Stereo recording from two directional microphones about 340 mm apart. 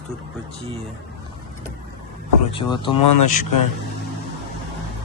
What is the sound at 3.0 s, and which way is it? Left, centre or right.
Speech, left.